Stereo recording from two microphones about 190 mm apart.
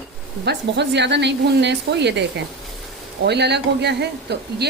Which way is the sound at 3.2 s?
60° right (ahead or behind).